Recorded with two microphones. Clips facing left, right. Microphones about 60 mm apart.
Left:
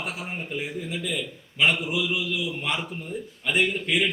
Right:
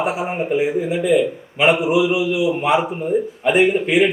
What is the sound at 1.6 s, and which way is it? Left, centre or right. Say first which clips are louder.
A man's voice: right 9 dB; centre.